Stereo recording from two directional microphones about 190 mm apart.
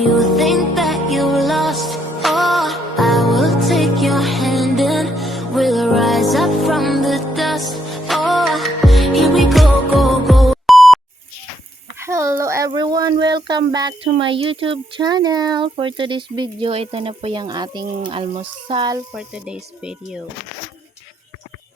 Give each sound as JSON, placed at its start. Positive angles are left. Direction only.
{"t": 0.0, "sound": "music", "side_deg": 0}
{"t": 11.9, "sound": "speech", "side_deg": -15}
{"t": 19.1, "sound": "speech", "side_deg": -5}